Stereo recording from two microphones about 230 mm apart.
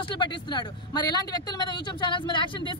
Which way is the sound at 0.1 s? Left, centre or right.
Centre.